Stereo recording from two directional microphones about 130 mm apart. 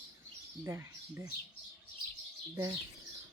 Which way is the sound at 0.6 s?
20° right (ahead or behind).